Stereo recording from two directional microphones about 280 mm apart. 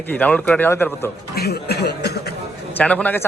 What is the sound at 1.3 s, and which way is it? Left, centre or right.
Speech, left.